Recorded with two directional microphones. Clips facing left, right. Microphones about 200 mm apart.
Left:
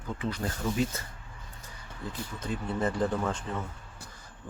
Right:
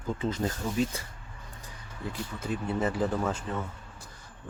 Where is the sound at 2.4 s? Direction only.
5° right (ahead or behind).